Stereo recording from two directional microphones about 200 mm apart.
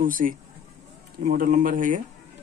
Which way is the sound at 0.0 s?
45° right (ahead or behind).